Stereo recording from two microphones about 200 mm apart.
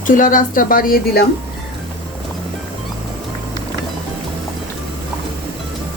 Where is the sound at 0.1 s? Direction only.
40° left (ahead or behind).